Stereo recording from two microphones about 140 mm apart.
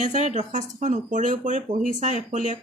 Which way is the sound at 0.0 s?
60° right (ahead or behind).